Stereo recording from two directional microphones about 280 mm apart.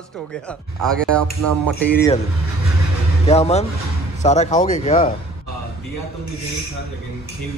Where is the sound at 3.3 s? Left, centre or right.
Left.